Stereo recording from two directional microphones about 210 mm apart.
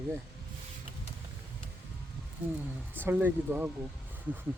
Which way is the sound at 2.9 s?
10° right (ahead or behind).